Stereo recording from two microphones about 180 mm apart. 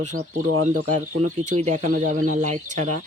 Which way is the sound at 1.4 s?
40° right (ahead or behind).